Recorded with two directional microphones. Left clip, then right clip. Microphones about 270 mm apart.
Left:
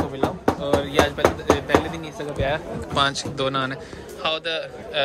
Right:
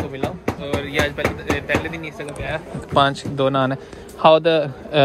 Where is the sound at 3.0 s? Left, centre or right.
Centre.